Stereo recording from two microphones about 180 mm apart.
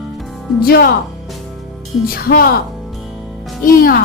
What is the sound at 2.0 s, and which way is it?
Speech, 55° left (ahead or behind).